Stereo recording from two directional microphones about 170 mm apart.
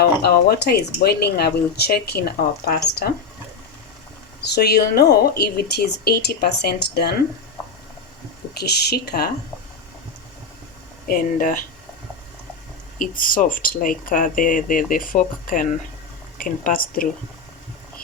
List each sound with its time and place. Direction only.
0.0 s speech: 70° left (ahead or behind)
4.4 s speech: 70° left (ahead or behind)
8.5 s speech: 75° left (ahead or behind)
11.1 s speech: 55° left (ahead or behind)
13.0 s a woman's voice: 55° left (ahead or behind)